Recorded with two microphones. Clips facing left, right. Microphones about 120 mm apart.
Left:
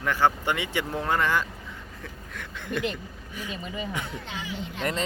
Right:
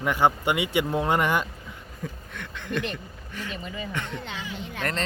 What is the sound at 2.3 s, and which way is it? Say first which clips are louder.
Speech: even; 5° left (ahead or behind).